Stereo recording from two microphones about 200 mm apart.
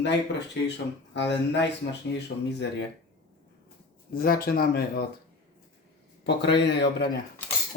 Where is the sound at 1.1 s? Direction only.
60° left (ahead or behind).